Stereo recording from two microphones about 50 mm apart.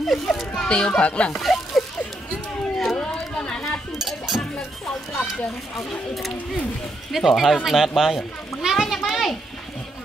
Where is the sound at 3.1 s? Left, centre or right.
Centre.